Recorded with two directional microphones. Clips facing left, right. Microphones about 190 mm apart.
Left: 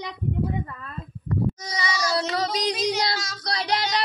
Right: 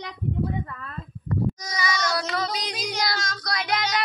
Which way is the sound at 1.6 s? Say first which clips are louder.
Even; 30° left (ahead or behind).